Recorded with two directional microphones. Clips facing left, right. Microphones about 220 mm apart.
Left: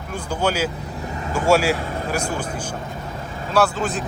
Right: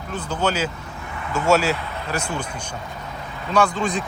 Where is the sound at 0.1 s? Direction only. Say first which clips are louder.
Left 1 dB; 10° left (ahead or behind).